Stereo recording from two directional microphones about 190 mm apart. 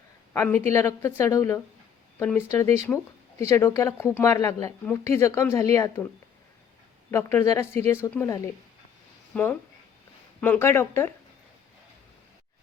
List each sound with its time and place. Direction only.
0.3 s speech: 10° left (ahead or behind)
7.1 s speech: 15° left (ahead or behind)